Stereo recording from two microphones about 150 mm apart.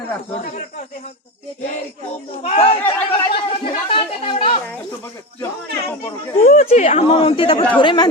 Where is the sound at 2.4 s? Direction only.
40° left (ahead or behind).